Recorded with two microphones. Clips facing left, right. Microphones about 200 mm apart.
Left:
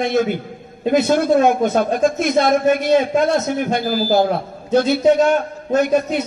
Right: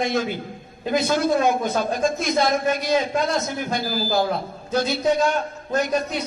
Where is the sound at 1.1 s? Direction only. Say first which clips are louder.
Left 4 dB; 55° left (ahead or behind).